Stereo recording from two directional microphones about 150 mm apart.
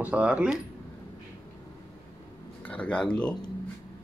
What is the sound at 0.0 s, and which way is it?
Speech, 10° right (ahead or behind).